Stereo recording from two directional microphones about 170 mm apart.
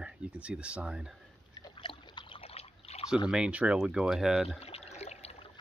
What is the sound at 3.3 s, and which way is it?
Speech, 5° right (ahead or behind).